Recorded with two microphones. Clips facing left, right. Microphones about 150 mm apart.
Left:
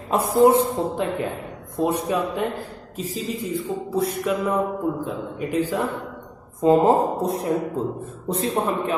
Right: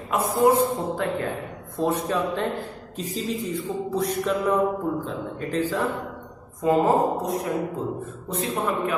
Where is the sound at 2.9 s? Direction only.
Centre (ahead or behind).